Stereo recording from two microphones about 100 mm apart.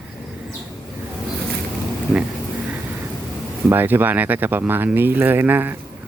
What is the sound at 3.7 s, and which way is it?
Speech, 20° right (ahead or behind).